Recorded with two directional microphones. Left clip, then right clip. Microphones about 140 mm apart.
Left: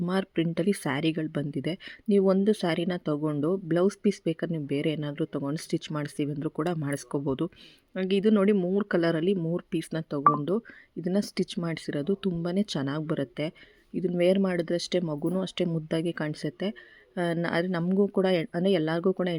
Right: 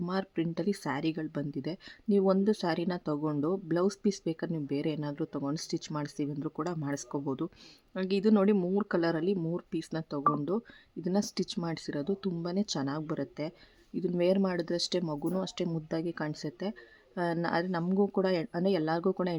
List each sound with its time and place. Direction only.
0.0 s speech: 25° left (ahead or behind)
7.9 s speech: 10° left (ahead or behind)
8.8 s speech: 15° left (ahead or behind)
13.9 s speech: 10° left (ahead or behind)